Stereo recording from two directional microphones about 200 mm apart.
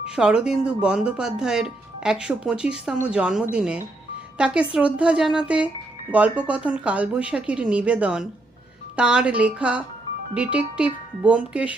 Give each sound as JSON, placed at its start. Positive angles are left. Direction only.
{"t": 0.0, "sound": "speech", "side_deg": -5}